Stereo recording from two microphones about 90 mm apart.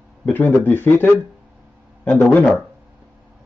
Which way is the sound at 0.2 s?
20° left (ahead or behind).